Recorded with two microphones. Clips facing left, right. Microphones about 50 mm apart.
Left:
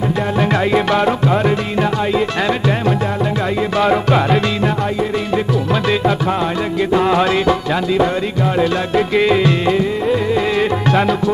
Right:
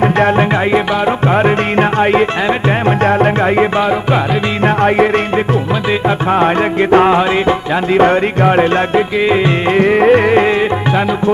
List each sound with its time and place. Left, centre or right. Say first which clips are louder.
1.2 s music: right 4 dB; right
3.8 s music: even; centre
4.6 s music: right 7 dB; right
6.3 s music: right 6 dB; right
7.2 s music: right 2 dB; right
7.9 s music: right 8 dB; right
9.1 s music: right 1 dB; centre
9.8 s music: right 8 dB; right
10.6 s music: right 1 dB; centre